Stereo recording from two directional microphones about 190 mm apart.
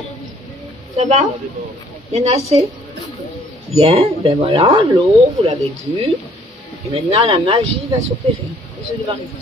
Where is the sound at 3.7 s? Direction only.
30° right (ahead or behind).